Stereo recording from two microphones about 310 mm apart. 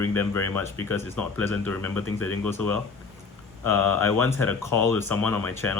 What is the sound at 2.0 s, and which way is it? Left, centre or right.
Speech, left.